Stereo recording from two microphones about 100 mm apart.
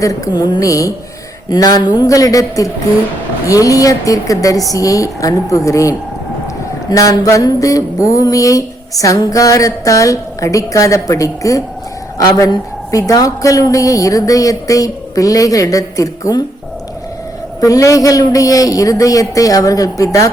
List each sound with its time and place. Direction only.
0.0 s a woman's voice: 40° left (ahead or behind)
17.6 s a woman's voice: 35° left (ahead or behind)